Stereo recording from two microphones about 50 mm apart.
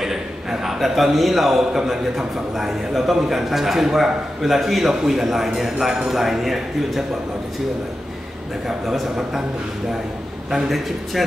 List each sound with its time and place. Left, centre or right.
0.0 s a man's voice: centre
8.6 s a man's voice: centre
10.5 s a man's voice: centre